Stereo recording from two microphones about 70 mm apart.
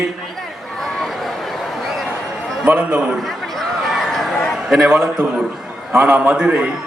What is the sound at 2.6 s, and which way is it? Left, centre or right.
Speech, centre.